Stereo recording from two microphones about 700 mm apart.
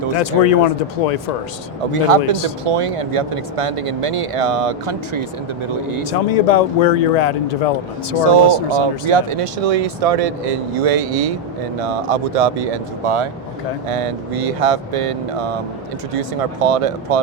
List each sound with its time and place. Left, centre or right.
0.2 s speech: left
1.9 s speech: right
6.1 s speech: left
8.2 s speech: right